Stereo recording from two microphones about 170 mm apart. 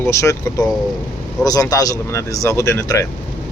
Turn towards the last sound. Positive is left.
turn(degrees=15)  # may be behind; listen again after turning